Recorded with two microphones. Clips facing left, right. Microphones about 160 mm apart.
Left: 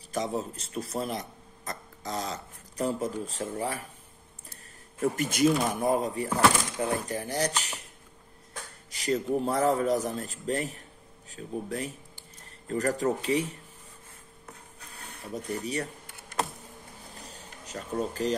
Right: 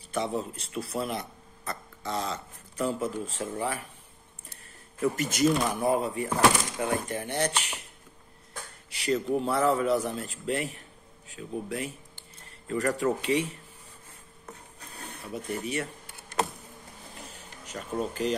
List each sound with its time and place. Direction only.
0.1 s a man's voice: 40° left (ahead or behind)
5.0 s a man's voice: 45° left (ahead or behind)
8.9 s a man's voice: 40° left (ahead or behind)
15.3 s a man's voice: 35° left (ahead or behind)
17.3 s a sound: 35° left (ahead or behind)